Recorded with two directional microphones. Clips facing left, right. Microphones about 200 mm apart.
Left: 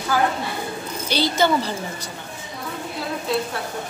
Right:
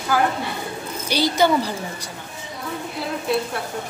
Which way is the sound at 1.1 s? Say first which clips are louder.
Right 1 dB; 10° right (ahead or behind).